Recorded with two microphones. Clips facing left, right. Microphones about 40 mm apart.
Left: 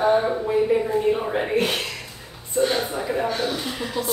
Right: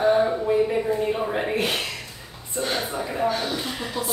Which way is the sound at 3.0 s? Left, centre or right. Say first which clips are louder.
Left 1 dB; centre.